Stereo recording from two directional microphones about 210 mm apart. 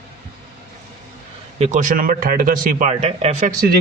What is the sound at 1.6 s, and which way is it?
A man's voice, 35° right (ahead or behind).